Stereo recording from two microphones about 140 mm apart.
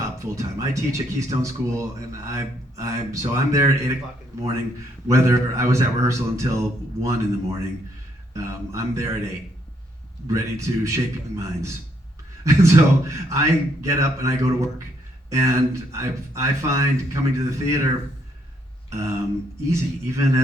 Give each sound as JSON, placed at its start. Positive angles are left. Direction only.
{"t": 0.3, "sound": "speech", "side_deg": -20}
{"t": 5.0, "sound": "speech", "side_deg": -20}
{"t": 18.9, "sound": "a sound", "side_deg": -20}
{"t": 19.7, "sound": "speech", "side_deg": -20}